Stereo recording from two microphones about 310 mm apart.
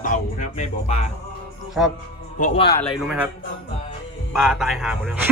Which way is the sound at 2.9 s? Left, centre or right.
Centre.